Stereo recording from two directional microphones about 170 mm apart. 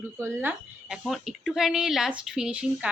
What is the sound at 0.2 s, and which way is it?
Speech, 15° right (ahead or behind).